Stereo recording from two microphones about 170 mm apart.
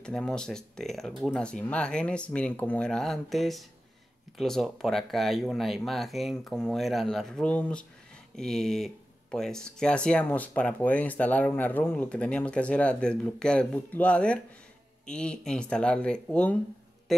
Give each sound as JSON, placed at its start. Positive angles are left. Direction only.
{"t": 0.0, "sound": "speech", "side_deg": 5}